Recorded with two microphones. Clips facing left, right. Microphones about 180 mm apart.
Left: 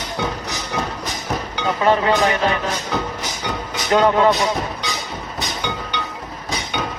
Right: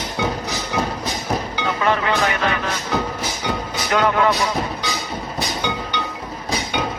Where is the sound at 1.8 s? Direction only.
25° left (ahead or behind).